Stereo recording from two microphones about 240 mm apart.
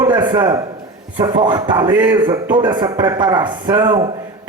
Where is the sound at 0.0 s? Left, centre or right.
Centre.